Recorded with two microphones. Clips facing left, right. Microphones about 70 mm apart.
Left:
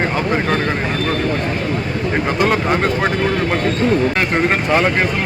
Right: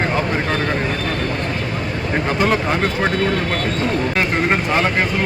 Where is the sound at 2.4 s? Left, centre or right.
Centre.